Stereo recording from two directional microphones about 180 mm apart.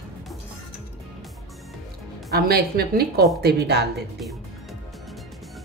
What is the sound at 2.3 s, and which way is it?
Speech, 60° right (ahead or behind).